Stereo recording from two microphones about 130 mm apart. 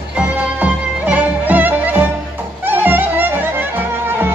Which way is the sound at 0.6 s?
10° right (ahead or behind).